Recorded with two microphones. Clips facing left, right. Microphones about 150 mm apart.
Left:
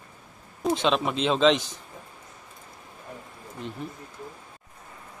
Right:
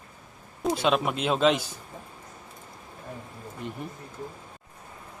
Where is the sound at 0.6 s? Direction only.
5° right (ahead or behind).